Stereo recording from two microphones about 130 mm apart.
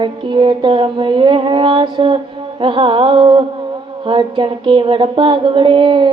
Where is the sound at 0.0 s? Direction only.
35° right (ahead or behind).